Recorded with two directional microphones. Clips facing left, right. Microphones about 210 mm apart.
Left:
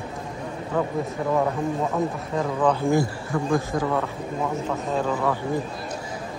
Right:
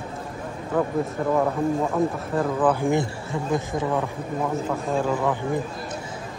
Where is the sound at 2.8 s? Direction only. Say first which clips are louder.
Left 1 dB; 20° right (ahead or behind).